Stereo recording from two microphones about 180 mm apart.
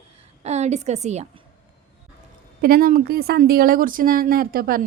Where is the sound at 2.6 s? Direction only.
55° right (ahead or behind).